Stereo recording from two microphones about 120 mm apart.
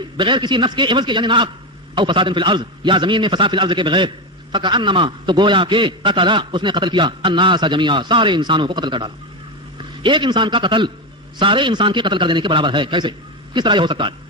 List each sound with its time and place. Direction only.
0.2 s a man's voice: 40° right (ahead or behind)